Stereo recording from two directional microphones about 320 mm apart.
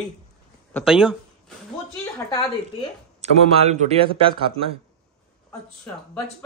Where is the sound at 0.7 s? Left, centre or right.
Centre.